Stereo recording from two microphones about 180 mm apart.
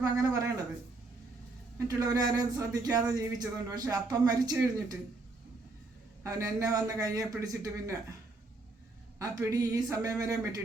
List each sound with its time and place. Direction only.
0.0 s speech: 20° right (ahead or behind)
1.9 s speech: 20° right (ahead or behind)
6.2 s speech: 15° right (ahead or behind)
9.1 s speech: 15° right (ahead or behind)